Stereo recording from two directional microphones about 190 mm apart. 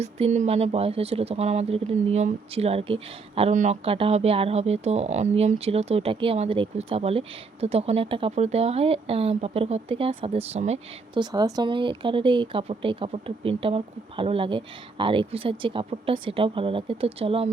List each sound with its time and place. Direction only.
0.0 s speech: 35° right (ahead or behind)
11.2 s speech: 20° right (ahead or behind)